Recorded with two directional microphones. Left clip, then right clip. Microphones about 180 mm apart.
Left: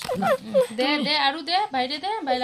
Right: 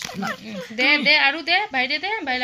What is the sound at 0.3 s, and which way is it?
Speech, 70° left (ahead or behind).